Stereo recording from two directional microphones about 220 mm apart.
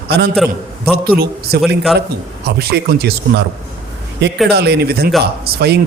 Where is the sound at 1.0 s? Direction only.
45° right (ahead or behind).